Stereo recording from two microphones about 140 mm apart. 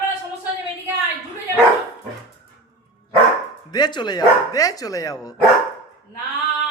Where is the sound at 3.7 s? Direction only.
30° left (ahead or behind).